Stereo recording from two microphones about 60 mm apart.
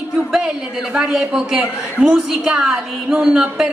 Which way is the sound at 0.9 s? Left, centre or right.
Centre.